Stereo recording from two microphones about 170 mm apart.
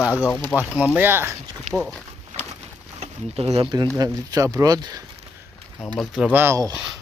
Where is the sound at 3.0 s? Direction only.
35° right (ahead or behind).